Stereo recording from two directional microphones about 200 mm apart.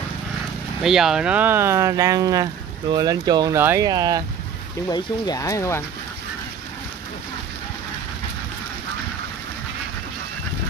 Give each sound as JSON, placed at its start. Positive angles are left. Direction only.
{"t": 0.8, "sound": "speech", "side_deg": 0}
{"t": 4.8, "sound": "speech", "side_deg": 20}